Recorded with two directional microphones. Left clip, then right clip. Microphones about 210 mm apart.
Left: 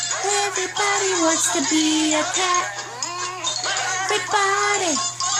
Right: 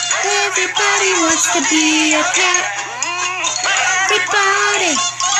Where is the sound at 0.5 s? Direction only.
40° right (ahead or behind).